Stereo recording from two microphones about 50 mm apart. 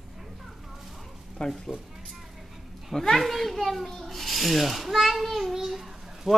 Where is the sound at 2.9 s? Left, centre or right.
Centre.